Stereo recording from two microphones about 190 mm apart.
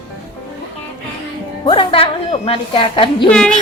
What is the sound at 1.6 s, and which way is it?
A woman's voice, 25° left (ahead or behind).